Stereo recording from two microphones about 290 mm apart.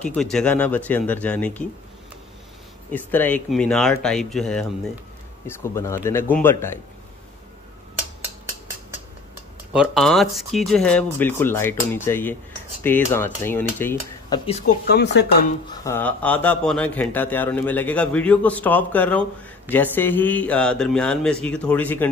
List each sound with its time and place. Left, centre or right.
0.0 s a man's voice: centre
2.9 s a man's voice: centre
5.5 s dishes: centre
9.7 s a man's voice: centre
11.1 s dishes: centre
14.9 s speech: left
15.8 s a man's voice: centre